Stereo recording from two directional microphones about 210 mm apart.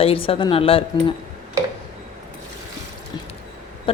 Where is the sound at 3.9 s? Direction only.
25° left (ahead or behind).